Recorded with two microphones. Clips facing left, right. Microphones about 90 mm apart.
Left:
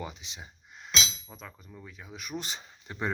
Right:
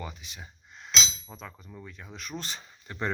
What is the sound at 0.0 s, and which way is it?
Speech, 20° left (ahead or behind).